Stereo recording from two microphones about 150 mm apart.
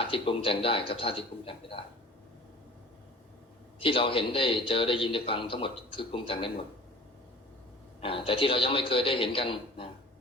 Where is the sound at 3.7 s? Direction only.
35° left (ahead or behind).